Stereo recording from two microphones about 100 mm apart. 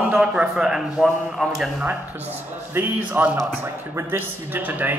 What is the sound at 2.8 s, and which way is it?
Speech, 15° right (ahead or behind).